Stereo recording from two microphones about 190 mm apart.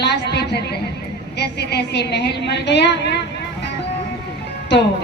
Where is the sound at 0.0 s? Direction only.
60° left (ahead or behind).